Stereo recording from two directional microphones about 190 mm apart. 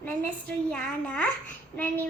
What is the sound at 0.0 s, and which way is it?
A woman's voice, 10° left (ahead or behind).